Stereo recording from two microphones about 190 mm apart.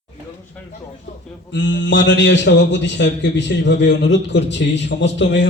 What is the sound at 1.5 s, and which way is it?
A man's voice, 70° left (ahead or behind).